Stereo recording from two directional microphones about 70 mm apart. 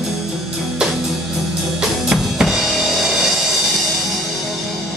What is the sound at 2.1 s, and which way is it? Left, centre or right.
Drum, centre.